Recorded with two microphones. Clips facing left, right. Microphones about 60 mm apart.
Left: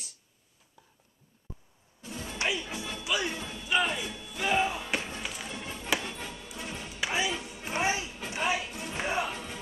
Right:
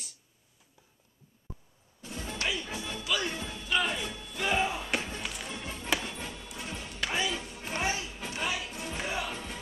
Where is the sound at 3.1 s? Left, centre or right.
Centre.